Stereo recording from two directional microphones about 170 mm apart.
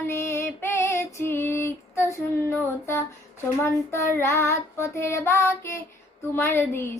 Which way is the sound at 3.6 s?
15° left (ahead or behind).